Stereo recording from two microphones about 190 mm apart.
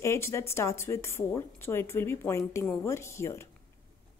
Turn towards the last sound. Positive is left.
turn(degrees=15)  # may be behind; listen again after turning